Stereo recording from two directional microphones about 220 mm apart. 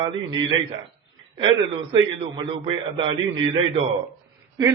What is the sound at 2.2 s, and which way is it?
A man's voice, 25° right (ahead or behind).